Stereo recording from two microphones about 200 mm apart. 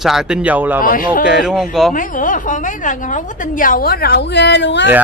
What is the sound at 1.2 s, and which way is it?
Speech, 5° right (ahead or behind).